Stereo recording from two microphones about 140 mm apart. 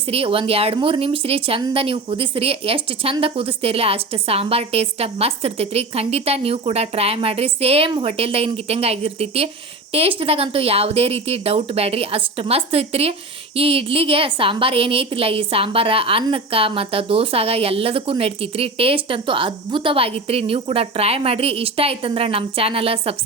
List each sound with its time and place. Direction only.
0.1 s a woman's voice: 40° right (ahead or behind)